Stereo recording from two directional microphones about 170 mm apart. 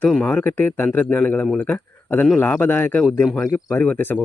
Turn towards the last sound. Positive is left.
turn(degrees=10)  # may be behind; listen again after turning